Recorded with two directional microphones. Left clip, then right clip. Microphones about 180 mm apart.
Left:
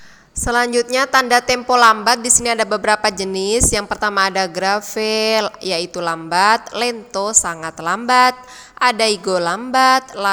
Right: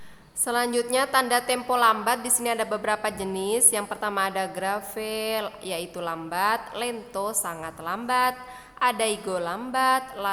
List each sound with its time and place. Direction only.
0.4 s a woman's voice: 25° left (ahead or behind)
9.7 s music: 35° left (ahead or behind)